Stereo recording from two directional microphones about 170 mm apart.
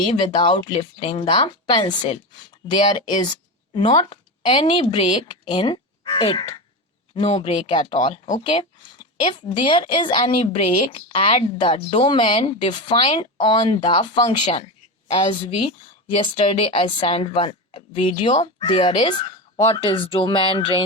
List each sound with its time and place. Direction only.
0.0 s speech: 30° left (ahead or behind)
3.8 s a woman's voice: 25° left (ahead or behind)